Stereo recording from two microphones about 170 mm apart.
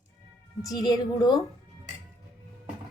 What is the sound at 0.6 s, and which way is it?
Speech, 20° left (ahead or behind).